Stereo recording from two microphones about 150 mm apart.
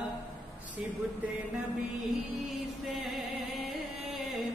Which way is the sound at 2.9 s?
Centre (ahead or behind).